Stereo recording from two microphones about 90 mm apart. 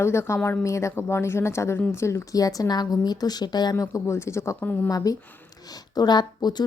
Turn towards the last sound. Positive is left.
turn(degrees=50)  # may be behind; listen again after turning